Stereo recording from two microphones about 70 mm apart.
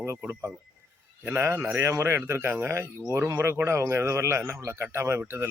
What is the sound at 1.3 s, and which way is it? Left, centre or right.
Speech, right.